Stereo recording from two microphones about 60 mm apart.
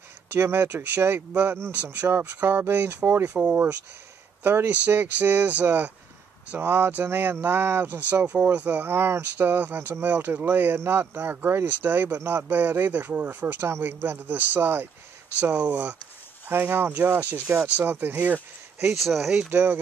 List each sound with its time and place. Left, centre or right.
0.3 s speech: right
6.6 s speech: right
8.8 s speech: right
13.7 s speech: right
16.4 s speech: right
18.9 s speech: centre
19.5 s speech: right